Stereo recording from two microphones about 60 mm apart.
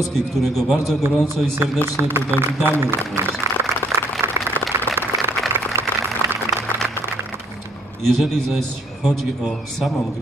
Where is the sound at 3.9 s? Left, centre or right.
Right.